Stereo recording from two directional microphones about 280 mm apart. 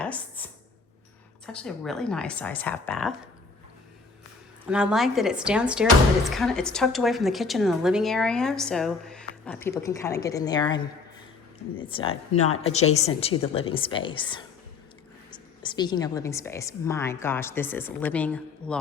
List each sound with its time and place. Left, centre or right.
0.0 s a sound: centre
1.5 s speech: centre
4.6 s a woman's voice: centre
15.6 s a woman's voice: centre